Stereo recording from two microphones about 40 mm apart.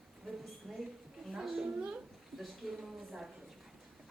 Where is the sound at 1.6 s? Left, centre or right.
Right.